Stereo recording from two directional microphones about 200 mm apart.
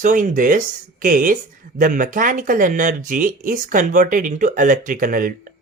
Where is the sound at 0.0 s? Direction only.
40° right (ahead or behind).